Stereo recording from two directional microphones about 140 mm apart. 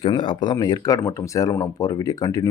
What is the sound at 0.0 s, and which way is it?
Speech, 35° left (ahead or behind).